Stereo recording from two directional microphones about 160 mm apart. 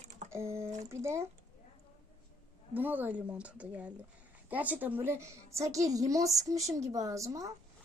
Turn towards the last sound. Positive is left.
turn(degrees=-20)  # may be behind; listen again after turning